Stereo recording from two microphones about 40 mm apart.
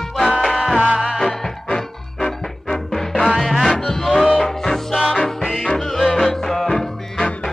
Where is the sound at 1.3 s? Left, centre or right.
Centre.